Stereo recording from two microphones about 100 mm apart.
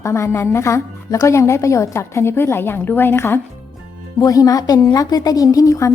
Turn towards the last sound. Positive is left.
turn(degrees=30)  # may be behind; listen again after turning